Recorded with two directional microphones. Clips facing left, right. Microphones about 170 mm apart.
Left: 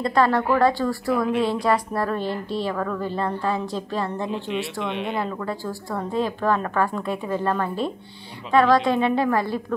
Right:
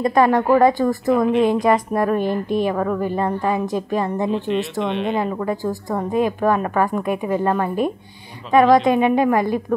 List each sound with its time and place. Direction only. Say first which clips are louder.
0.0 s a woman's voice: right 4 dB; 15° right (ahead or behind)